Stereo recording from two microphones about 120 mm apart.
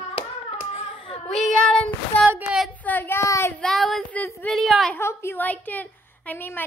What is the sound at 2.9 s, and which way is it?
Speech, 15° left (ahead or behind).